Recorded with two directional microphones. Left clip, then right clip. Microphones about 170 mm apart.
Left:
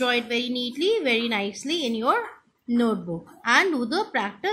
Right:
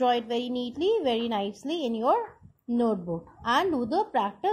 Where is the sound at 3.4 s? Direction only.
20° right (ahead or behind).